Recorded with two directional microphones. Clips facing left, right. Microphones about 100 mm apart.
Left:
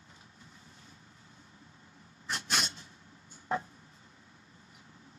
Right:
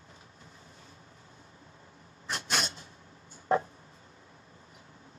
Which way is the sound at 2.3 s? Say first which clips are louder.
Right 2 dB; 35° right (ahead or behind).